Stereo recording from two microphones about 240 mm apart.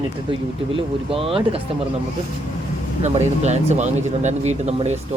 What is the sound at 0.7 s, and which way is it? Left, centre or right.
Speech, right.